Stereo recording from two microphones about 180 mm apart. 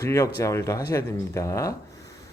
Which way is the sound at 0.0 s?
15° left (ahead or behind).